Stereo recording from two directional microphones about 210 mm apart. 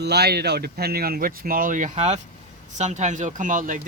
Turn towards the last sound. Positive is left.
turn(degrees=-40)  # may be behind; listen again after turning